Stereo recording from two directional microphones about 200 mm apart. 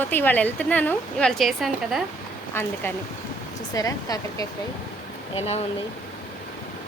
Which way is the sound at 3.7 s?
20° left (ahead or behind).